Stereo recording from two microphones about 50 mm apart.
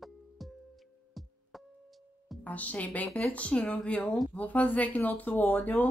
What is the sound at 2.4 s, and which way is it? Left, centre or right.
A woman's voice, left.